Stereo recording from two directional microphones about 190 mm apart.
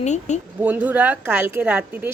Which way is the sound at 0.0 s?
40° left (ahead or behind).